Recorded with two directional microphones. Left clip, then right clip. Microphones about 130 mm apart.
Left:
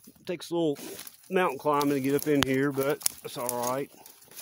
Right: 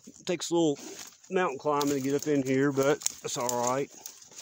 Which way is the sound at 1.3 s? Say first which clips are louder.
Left 2 dB; 15° left (ahead or behind).